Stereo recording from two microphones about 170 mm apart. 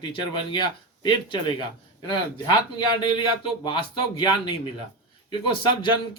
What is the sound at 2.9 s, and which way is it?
A man's voice, 30° left (ahead or behind).